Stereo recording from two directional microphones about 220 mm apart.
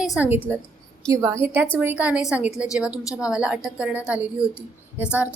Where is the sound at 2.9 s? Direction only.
15° left (ahead or behind).